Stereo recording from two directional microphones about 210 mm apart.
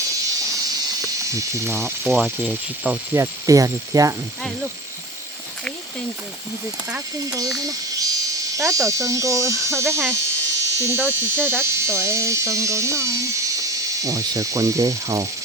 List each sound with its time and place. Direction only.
1.2 s speech: 15° right (ahead or behind)
2.0 s speech: centre (ahead or behind); by 4.1 s 15° right (ahead or behind)
6.9 s speech: 15° right (ahead or behind)